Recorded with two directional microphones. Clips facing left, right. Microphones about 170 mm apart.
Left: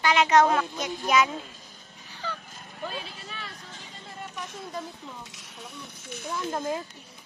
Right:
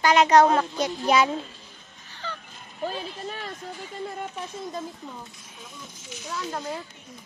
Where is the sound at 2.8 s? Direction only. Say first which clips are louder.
Right 6 dB; 40° right (ahead or behind).